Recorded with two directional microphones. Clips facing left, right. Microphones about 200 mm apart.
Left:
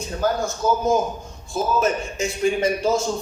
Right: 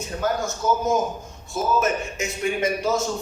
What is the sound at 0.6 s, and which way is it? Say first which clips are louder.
Speech: left 2 dB; 30° left (ahead or behind).